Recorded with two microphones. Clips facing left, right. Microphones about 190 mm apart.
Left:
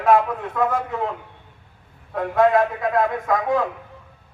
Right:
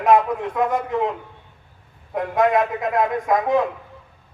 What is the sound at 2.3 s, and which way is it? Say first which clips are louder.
Speech: left 2 dB; 20° right (ahead or behind).